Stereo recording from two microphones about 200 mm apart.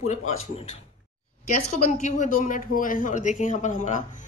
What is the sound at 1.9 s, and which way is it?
A woman's voice, 40° left (ahead or behind).